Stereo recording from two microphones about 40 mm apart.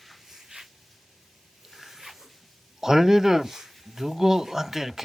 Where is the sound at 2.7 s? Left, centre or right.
Centre.